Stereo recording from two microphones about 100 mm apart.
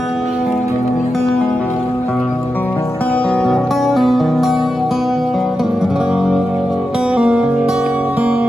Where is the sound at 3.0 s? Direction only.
10° left (ahead or behind); by 8.4 s 10° right (ahead or behind).